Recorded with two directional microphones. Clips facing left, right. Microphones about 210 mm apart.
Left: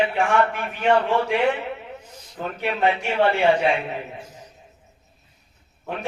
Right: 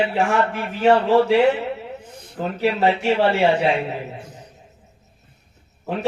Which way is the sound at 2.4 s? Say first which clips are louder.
Right 4 dB; 30° right (ahead or behind).